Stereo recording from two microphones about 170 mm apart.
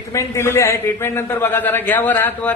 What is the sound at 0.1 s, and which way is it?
A man's voice, 15° left (ahead or behind).